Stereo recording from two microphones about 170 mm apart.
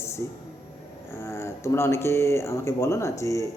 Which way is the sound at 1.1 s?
15° left (ahead or behind).